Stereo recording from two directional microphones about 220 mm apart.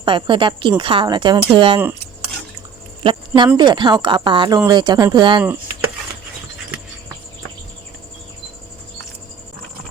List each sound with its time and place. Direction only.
0.0 s a woman's voice: 20° right (ahead or behind)
3.0 s a sound: 20° right (ahead or behind)
3.6 s a woman's voice: 20° right (ahead or behind)